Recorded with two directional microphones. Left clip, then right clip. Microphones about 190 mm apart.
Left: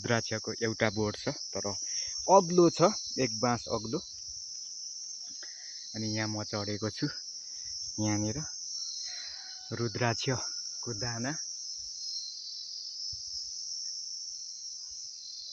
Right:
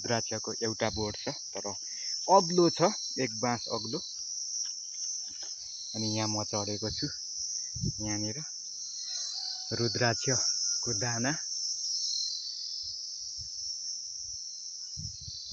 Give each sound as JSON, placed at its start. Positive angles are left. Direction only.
{"t": 0.1, "sound": "cricket", "side_deg": 30}
{"t": 6.0, "sound": "cricket", "side_deg": 0}
{"t": 6.5, "sound": "cricket", "side_deg": 15}
{"t": 8.0, "sound": "cricket", "side_deg": 35}
{"t": 9.7, "sound": "cricket", "side_deg": 0}
{"t": 11.0, "sound": "cricket", "side_deg": -30}